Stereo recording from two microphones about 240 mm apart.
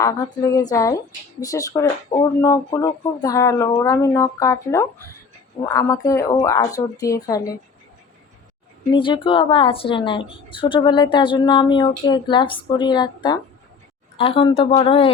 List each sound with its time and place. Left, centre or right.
0.0 s speech: centre
8.9 s speech: centre